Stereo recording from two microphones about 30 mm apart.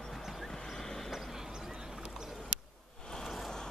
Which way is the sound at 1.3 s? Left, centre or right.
Centre.